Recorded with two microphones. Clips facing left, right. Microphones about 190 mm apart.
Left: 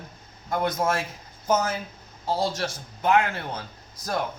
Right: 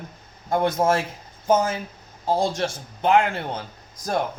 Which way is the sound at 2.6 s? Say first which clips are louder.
Right 4 dB; 25° right (ahead or behind).